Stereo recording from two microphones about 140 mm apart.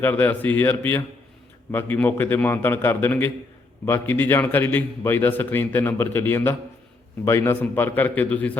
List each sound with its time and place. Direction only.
0.0 s a man's voice: 15° left (ahead or behind)